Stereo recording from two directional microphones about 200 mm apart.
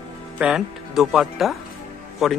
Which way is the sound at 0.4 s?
5° right (ahead or behind).